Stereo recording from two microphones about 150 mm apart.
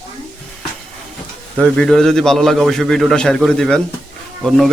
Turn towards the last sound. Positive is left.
turn(degrees=0)  # may be behind; listen again after turning